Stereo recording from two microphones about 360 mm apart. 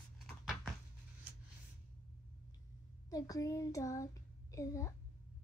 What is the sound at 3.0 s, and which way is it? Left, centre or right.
Child singing, centre.